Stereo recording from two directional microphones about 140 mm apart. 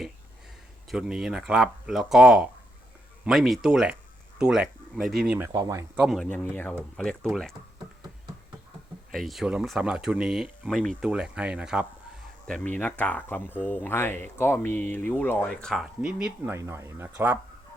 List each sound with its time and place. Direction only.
0.9 s speech: 5° right (ahead or behind)
5.5 s speech: 30° right (ahead or behind)
6.0 s speech: centre (ahead or behind)
6.2 s speech: 10° left (ahead or behind)
9.1 s speech: centre (ahead or behind)
12.5 s speech: 10° left (ahead or behind); by 16.3 s 5° right (ahead or behind)
16.5 s speech: 20° right (ahead or behind)